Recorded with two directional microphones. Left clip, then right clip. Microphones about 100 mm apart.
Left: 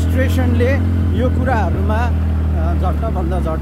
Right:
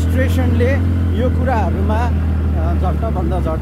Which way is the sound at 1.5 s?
15° right (ahead or behind).